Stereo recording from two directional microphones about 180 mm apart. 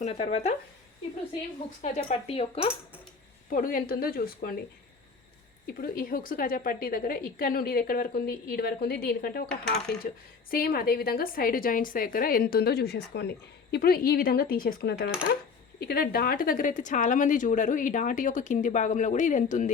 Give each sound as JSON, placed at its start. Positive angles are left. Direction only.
{"t": 0.0, "sound": "speech", "side_deg": 35}
{"t": 1.8, "sound": "speech", "side_deg": 35}
{"t": 3.5, "sound": "a woman's voice", "side_deg": 50}
{"t": 5.6, "sound": "a woman's voice", "side_deg": 55}
{"t": 9.6, "sound": "a woman's voice", "side_deg": 65}